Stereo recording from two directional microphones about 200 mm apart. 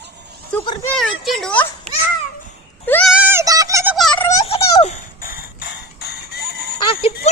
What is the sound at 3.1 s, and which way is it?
Synthetic singing, 10° right (ahead or behind).